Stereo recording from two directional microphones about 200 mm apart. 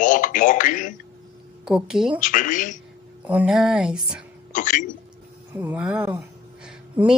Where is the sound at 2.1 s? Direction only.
40° left (ahead or behind).